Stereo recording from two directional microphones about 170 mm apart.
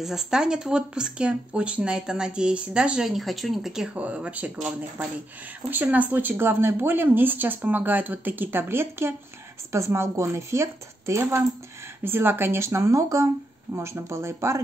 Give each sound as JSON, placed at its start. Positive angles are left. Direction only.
{"t": 0.0, "sound": "speech", "side_deg": 0}